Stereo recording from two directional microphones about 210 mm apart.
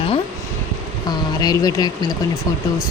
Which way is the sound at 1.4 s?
20° left (ahead or behind).